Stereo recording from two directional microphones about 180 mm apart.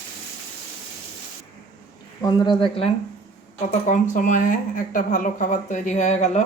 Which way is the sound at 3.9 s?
45° left (ahead or behind).